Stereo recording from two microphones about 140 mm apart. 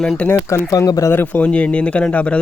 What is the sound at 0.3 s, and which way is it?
A man's voice, 20° left (ahead or behind).